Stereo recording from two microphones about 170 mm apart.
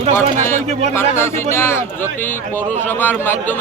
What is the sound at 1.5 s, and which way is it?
Speech, 15° left (ahead or behind).